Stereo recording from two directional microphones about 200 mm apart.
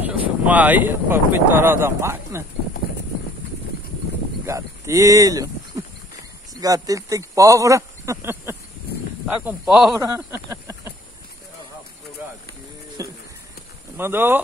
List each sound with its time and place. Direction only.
0.1 s speech: 10° right (ahead or behind)
4.5 s speech: 15° right (ahead or behind)
6.5 s speech: 15° right (ahead or behind)
13.0 s a sound: 15° right (ahead or behind)
13.9 s speech: 10° right (ahead or behind)